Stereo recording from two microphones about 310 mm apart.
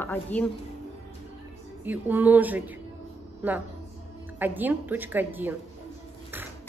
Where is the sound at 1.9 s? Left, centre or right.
Centre.